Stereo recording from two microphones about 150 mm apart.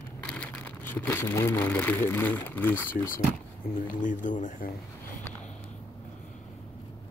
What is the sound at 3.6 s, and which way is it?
Speech, 80° left.